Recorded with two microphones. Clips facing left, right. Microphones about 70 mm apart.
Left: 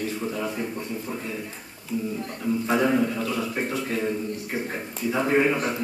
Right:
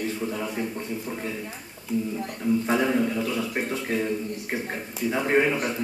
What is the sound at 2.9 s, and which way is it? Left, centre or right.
Speech, centre.